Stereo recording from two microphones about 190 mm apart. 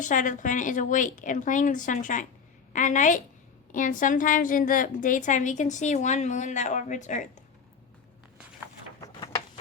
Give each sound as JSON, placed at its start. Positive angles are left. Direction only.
{"t": 0.0, "sound": "a woman's voice", "side_deg": 40}